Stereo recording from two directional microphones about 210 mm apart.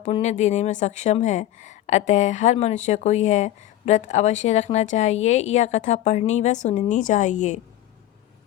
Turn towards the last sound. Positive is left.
turn(degrees=35)  # may be behind; listen again after turning